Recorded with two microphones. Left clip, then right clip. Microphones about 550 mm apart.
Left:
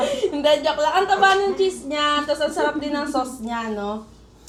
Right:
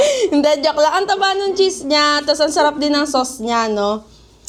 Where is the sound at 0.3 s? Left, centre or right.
Right.